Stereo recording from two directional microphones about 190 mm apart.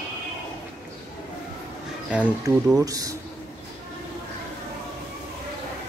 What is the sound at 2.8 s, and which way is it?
Speech, 20° right (ahead or behind).